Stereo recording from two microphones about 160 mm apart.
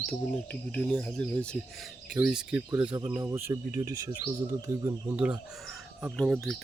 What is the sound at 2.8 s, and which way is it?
Speech, 30° right (ahead or behind).